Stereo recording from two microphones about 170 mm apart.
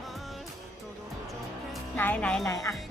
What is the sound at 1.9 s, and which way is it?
Speech, 10° left (ahead or behind).